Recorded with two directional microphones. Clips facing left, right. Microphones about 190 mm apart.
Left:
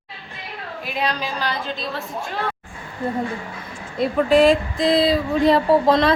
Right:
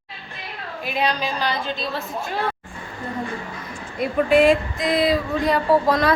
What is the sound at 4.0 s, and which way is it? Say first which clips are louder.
A woman's voice: left 1 dB; 35° left (ahead or behind).